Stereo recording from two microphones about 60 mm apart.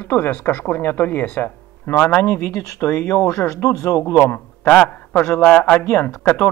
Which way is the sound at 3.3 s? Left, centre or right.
Left.